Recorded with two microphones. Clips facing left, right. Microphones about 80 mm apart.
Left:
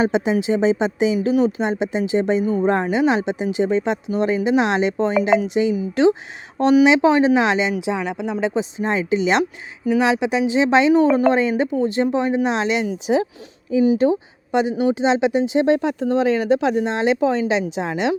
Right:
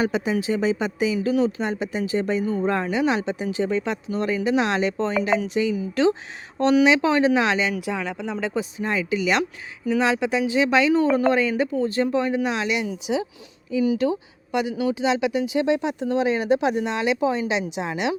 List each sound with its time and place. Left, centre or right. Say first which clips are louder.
0.0 s speech: left 4 dB; left
9.4 s speech: left 5 dB; centre
15.6 s speech: left 4 dB; left